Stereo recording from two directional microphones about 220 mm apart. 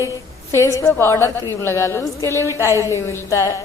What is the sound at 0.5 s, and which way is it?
A woman's voice, 15° left (ahead or behind).